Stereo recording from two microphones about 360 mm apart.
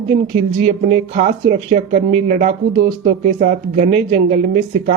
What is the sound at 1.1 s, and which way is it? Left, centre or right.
Speech, right.